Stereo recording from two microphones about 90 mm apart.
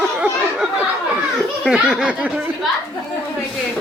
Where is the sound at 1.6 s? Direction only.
5° right (ahead or behind).